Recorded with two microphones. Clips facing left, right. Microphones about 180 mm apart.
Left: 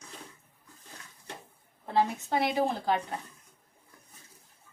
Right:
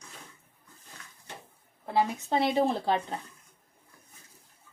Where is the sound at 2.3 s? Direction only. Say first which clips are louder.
Right 2 dB; 25° right (ahead or behind).